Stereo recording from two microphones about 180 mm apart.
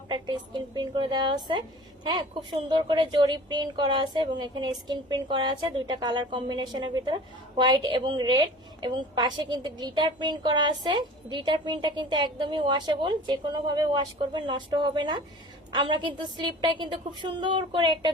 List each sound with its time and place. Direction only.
0.1 s a woman's voice: 25° right (ahead or behind)